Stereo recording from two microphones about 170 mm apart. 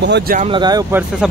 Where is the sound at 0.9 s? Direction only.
10° right (ahead or behind).